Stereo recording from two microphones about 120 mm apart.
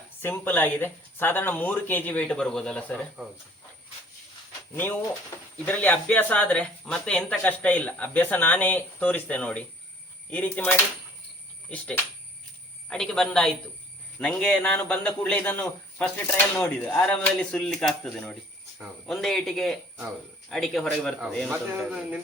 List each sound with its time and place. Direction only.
0.2 s speech: 15° left (ahead or behind)
5.6 s a man's voice: 15° left (ahead or behind); by 22.2 s 5° right (ahead or behind)